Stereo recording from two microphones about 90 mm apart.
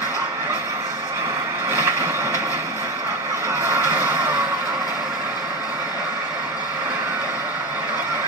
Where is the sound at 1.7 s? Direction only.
30° right (ahead or behind).